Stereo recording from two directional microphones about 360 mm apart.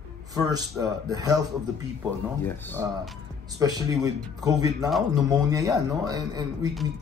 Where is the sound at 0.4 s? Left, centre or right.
Centre.